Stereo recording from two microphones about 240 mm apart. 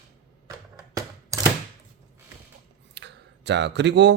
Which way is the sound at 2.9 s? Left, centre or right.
Right.